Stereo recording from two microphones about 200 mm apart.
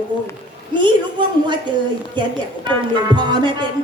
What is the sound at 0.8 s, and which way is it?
Speech, 25° right (ahead or behind).